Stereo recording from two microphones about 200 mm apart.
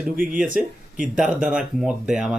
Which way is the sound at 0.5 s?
40° right (ahead or behind).